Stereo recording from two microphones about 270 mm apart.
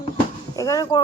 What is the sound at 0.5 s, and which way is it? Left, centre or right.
Speech, centre.